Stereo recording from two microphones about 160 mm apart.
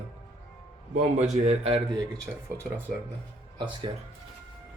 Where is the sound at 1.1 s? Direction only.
45° right (ahead or behind).